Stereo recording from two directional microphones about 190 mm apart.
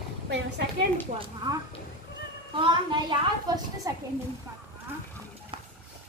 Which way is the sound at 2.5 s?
25° right (ahead or behind).